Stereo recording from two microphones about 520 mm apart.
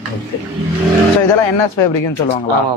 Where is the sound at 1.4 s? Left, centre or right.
Left.